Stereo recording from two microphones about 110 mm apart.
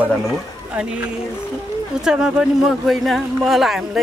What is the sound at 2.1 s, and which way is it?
Speech, 5° right (ahead or behind).